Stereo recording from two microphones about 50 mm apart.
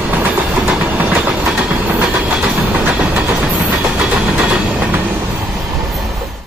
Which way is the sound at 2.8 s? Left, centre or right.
Right.